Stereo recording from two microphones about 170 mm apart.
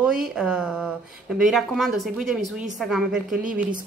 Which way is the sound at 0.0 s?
5° right (ahead or behind).